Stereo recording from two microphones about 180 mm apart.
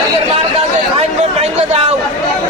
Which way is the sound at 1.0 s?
35° right (ahead or behind).